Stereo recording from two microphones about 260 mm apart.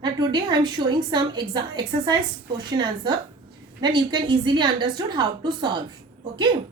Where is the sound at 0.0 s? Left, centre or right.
Centre.